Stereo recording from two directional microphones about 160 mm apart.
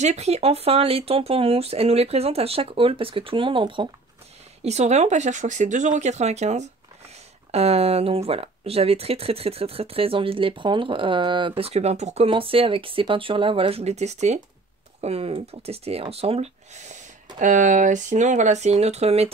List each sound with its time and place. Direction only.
0.0 s speech: 45° right (ahead or behind)
4.6 s speech: 45° right (ahead or behind)